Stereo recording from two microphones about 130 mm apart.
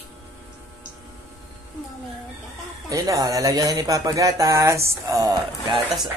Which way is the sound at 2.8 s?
25° right (ahead or behind).